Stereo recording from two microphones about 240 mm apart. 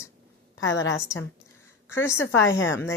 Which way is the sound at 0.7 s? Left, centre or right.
Left.